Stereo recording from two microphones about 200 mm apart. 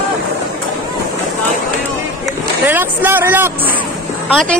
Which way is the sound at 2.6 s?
10° right (ahead or behind).